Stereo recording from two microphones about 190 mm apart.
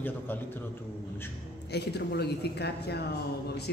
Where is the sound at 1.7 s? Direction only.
60° left (ahead or behind).